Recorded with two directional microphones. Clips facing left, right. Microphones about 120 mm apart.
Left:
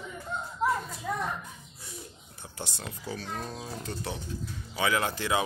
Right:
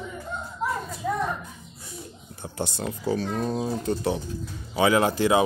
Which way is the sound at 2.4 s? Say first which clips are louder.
Right 10 dB; 30° right (ahead or behind).